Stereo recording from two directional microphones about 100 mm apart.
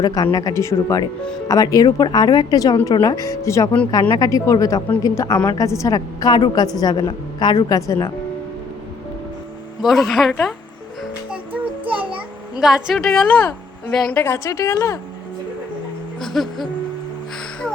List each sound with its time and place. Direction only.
0.0 s a woman's voice: 40° left (ahead or behind)
7.8 s a woman's voice: 30° left (ahead or behind)
9.8 s speech: centre (ahead or behind)
11.5 s a sound: 15° right (ahead or behind)
12.5 s a woman's voice: 5° right (ahead or behind)
14.2 s speech: 25° left (ahead or behind)
16.2 s speech: centre (ahead or behind)